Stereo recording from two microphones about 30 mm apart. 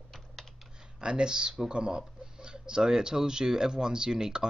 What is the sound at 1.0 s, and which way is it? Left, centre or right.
Speech, right.